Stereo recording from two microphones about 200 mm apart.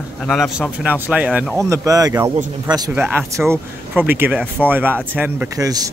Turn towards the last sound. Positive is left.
turn(degrees=-10)  # may be behind; listen again after turning